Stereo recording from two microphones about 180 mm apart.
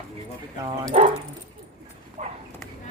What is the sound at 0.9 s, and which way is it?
Speech, 40° right (ahead or behind).